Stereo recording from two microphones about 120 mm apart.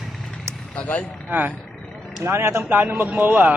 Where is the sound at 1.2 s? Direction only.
15° right (ahead or behind).